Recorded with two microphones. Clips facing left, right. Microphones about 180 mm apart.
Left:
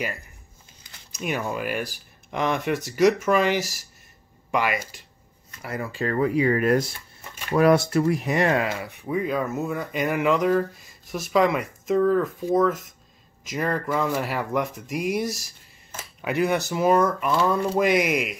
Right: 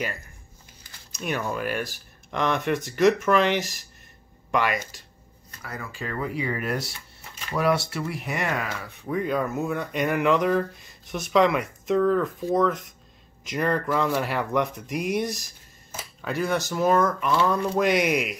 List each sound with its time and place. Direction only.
1.1 s speech: 10° left (ahead or behind)
5.6 s speech: 25° left (ahead or behind)
5.9 s speech: 40° left (ahead or behind)
7.5 s speech: 50° left (ahead or behind); by 8.9 s 25° left (ahead or behind)
9.0 s speech: 5° left (ahead or behind)
16.0 s speech: 15° left (ahead or behind)